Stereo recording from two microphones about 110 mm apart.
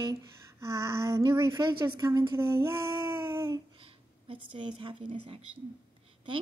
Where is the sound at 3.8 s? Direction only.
55° right (ahead or behind).